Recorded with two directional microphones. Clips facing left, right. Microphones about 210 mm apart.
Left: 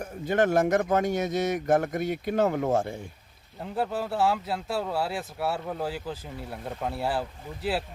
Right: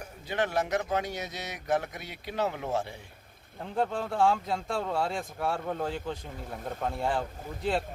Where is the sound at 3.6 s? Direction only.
5° left (ahead or behind).